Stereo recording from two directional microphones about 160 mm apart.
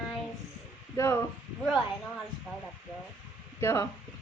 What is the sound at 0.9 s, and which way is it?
Speech, 15° left (ahead or behind).